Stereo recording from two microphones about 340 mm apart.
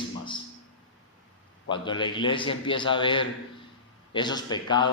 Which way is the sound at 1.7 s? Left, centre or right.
Centre.